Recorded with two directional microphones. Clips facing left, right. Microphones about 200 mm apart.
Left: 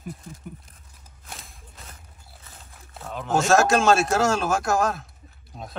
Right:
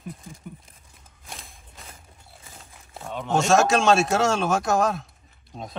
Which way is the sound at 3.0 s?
Centre (ahead or behind).